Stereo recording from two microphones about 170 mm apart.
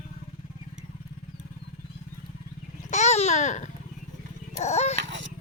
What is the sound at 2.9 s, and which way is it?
Babbling, 45° left (ahead or behind).